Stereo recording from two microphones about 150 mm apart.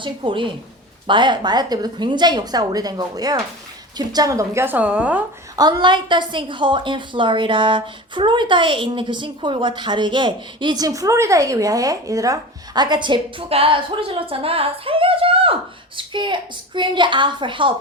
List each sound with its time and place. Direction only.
0.0 s a woman's voice: 35° right (ahead or behind); by 5.2 s 10° right (ahead or behind)
5.5 s a woman's voice: 25° right (ahead or behind)